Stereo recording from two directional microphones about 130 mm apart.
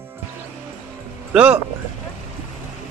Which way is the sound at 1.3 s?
10° right (ahead or behind).